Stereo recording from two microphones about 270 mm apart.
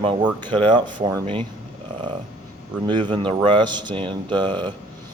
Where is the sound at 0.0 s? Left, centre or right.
Centre.